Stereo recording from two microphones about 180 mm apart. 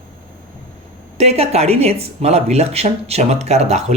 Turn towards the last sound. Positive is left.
turn(degrees=-40)  # may be behind; listen again after turning